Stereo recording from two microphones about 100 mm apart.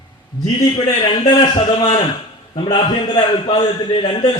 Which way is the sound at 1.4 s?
50° left (ahead or behind).